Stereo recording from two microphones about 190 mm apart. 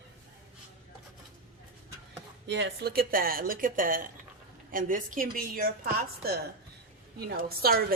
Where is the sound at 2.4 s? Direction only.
65° right (ahead or behind).